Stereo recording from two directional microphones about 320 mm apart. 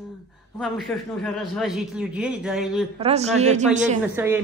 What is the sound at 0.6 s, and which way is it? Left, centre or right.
A man's voice, centre.